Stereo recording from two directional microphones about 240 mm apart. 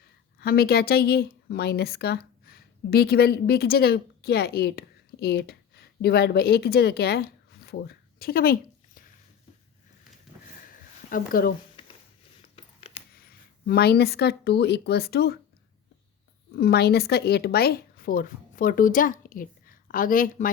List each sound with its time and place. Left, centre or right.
0.0 s a woman's voice: left
11.1 s speech: left
12.5 s a sound: left
13.1 s speech: left
16.6 s speech: left